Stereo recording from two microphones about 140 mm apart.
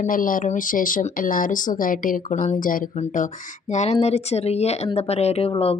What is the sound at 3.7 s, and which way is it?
Speech, 50° left (ahead or behind).